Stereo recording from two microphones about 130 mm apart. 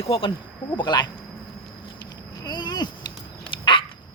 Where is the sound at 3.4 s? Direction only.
40° left (ahead or behind).